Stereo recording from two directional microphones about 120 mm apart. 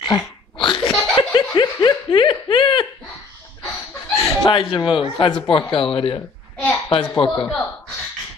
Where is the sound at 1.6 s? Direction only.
35° left (ahead or behind).